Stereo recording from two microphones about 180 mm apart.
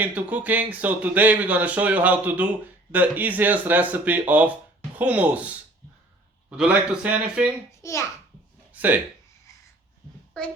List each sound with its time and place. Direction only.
0.0 s speech: 10° right (ahead or behind)
6.6 s speech: 5° right (ahead or behind)
7.7 s a child's voice: 15° left (ahead or behind)
8.7 s a sound: 10° right (ahead or behind)